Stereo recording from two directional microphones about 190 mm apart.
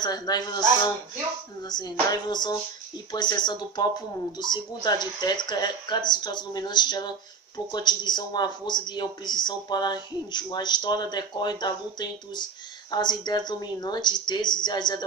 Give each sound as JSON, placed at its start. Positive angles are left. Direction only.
{"t": 0.0, "sound": "speech", "side_deg": 20}
{"t": 1.6, "sound": "speech", "side_deg": 20}